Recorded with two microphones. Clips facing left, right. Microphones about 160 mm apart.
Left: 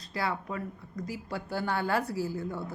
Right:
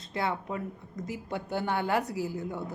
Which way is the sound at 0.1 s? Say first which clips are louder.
Right 1 dB; 20° right (ahead or behind).